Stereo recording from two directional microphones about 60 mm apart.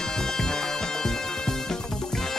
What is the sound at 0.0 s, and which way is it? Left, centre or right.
Music, centre.